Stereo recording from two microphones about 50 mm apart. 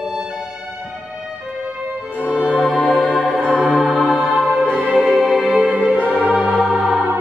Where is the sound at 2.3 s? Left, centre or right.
Right.